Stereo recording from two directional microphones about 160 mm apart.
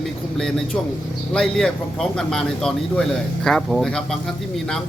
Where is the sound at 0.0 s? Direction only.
5° left (ahead or behind).